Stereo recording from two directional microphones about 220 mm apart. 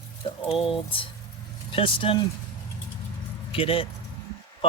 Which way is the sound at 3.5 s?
25° left (ahead or behind).